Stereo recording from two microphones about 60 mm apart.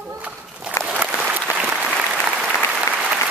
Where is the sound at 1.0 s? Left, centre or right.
Right.